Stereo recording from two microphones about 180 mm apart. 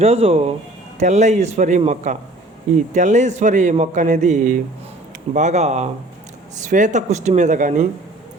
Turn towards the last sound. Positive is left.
turn(degrees=-45)  # may be behind; listen again after turning